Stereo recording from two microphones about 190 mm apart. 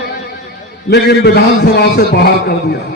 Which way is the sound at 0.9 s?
60° left (ahead or behind).